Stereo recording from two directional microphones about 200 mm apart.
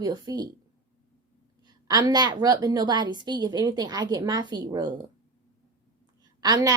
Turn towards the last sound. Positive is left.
turn(degrees=-20)  # may be behind; listen again after turning